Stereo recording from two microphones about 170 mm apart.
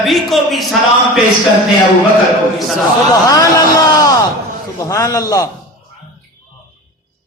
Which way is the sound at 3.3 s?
20° left (ahead or behind).